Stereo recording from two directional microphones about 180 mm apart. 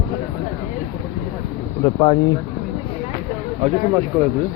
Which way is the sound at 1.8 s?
25° left (ahead or behind).